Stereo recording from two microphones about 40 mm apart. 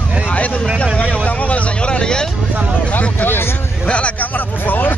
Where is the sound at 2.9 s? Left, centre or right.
Left.